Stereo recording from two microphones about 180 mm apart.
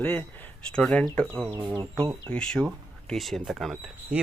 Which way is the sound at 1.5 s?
10° right (ahead or behind).